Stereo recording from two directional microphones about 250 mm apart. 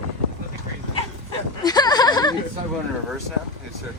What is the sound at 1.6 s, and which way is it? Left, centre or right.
Speech, centre.